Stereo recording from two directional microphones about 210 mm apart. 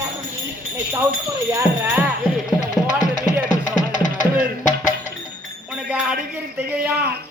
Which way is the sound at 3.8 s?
35° left (ahead or behind).